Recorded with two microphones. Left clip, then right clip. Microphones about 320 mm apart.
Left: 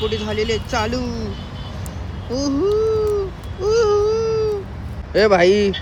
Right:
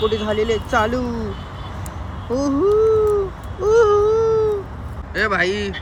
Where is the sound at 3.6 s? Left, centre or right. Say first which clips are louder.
Right 2 dB; centre.